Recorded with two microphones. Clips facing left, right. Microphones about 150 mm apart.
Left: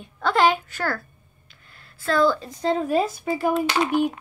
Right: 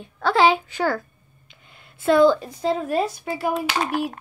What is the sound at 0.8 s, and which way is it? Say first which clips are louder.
A woman's voice: right 4 dB; 15° right (ahead or behind).